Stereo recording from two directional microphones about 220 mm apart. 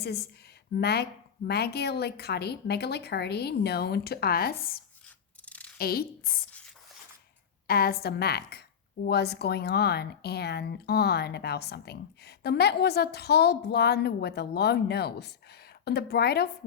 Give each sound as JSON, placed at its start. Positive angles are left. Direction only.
{"t": 0.0, "sound": "speech", "side_deg": 45}
{"t": 5.0, "sound": "scissors", "side_deg": 5}
{"t": 5.7, "sound": "a woman's voice", "side_deg": 45}
{"t": 7.7, "sound": "speech", "side_deg": 45}